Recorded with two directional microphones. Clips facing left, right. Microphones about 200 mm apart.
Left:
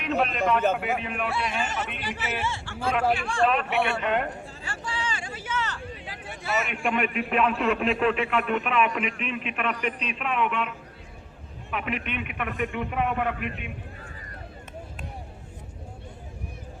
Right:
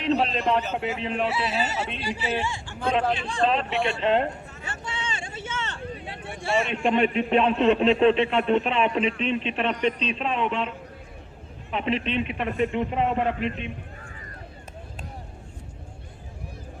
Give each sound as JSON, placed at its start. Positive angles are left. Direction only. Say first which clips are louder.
{"t": 0.0, "sound": "a sound", "louder": "right 2 dB", "side_deg": -30}
{"t": 0.8, "sound": "a man's voice", "louder": "right 2 dB", "side_deg": -30}
{"t": 1.3, "sound": "a man's voice", "louder": "right 2 dB", "side_deg": -5}